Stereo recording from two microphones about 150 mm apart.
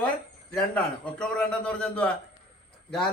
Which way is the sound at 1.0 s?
5° left (ahead or behind).